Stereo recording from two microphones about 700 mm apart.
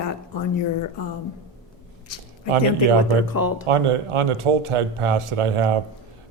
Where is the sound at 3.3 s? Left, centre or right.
Left.